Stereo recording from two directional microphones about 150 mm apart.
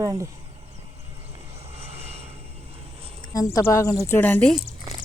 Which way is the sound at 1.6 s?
45° right (ahead or behind).